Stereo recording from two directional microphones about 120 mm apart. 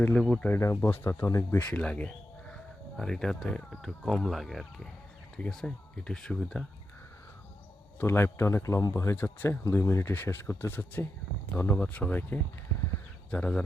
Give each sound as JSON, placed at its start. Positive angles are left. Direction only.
{"t": 0.1, "sound": "speech", "side_deg": 5}
{"t": 0.4, "sound": "speech", "side_deg": 20}
{"t": 7.9, "sound": "speech", "side_deg": 20}